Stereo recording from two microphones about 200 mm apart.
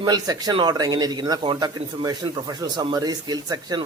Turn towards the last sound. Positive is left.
turn(degrees=-20)  # may be behind; listen again after turning